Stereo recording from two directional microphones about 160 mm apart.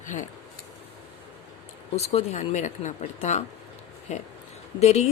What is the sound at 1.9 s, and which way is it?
Speech, 40° left (ahead or behind).